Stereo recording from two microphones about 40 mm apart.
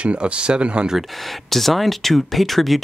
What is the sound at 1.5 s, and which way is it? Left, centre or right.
Speech, centre.